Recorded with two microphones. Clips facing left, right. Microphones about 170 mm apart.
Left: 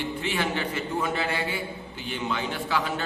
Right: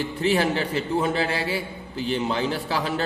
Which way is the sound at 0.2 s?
35° right (ahead or behind).